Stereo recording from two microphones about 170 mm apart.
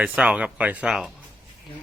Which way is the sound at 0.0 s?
10° right (ahead or behind).